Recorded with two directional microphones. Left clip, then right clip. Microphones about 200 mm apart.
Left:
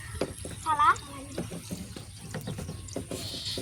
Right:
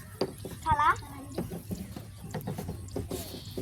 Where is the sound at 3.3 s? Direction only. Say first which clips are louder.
Left 7 dB; 45° right (ahead or behind).